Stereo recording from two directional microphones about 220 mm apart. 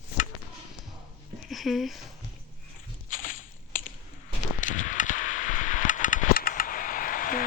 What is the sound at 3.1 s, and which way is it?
Walk, 35° left (ahead or behind).